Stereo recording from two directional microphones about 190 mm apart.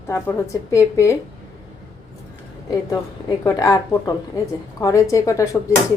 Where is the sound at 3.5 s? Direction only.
20° left (ahead or behind).